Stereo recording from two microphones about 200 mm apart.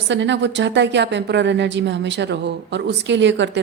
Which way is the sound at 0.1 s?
65° right (ahead or behind).